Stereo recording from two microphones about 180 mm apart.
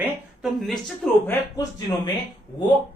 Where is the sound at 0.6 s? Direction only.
Centre (ahead or behind).